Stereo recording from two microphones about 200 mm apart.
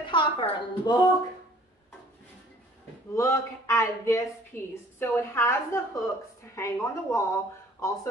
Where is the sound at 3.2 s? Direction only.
15° left (ahead or behind).